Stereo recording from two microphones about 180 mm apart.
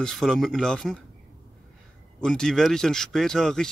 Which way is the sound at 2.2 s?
5° left (ahead or behind).